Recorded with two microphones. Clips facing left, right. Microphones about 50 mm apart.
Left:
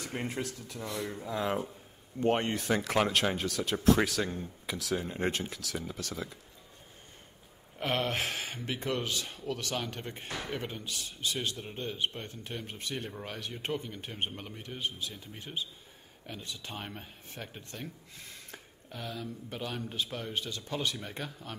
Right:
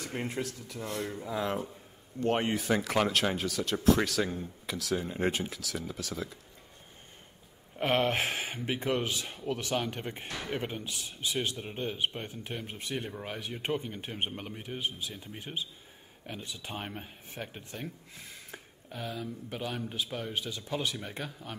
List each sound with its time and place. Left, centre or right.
0.0 s speech: centre
0.8 s speech: right
1.1 s speech: centre
7.8 s speech: right; by 21.5 s centre